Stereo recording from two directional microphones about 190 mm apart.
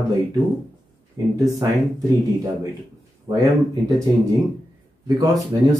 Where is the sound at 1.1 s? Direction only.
15° right (ahead or behind).